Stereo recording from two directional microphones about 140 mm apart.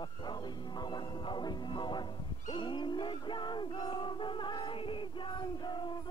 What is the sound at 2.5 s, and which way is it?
Music, 35° left (ahead or behind).